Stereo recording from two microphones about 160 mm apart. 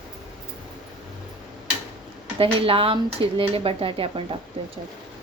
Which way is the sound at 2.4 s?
35° right (ahead or behind).